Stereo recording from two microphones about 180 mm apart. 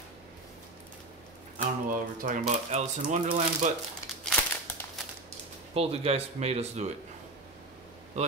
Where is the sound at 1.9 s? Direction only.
50° right (ahead or behind).